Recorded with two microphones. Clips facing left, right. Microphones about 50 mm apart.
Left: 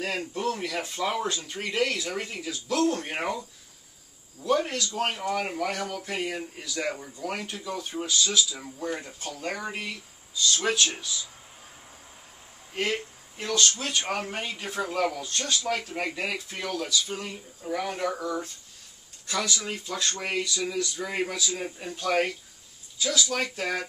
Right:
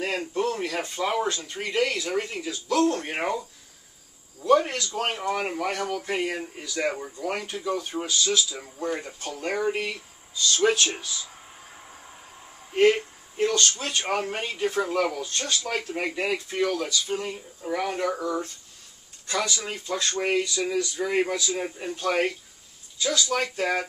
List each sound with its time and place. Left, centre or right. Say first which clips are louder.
0.0 s speech: right 2 dB; right
0.4 s speech: right 3 dB; centre
6.8 s speech: right 4 dB; right
7.2 s speech: right 3 dB; centre
12.9 s a sound: right 2 dB; centre
13.6 s speech: even; centre
13.9 s speech: right 2 dB; centre
14.2 s speech: right 5 dB; centre
23.3 s speech: right 4 dB; centre